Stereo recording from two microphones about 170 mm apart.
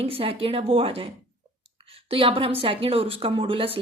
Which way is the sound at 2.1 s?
30° right (ahead or behind).